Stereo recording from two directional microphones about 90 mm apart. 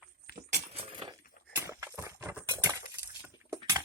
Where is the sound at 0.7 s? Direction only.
90° right.